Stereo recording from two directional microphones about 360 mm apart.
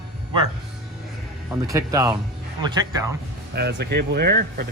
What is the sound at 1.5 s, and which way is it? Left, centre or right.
Speech, centre.